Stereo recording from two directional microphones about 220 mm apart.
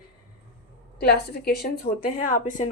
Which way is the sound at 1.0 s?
45° left (ahead or behind).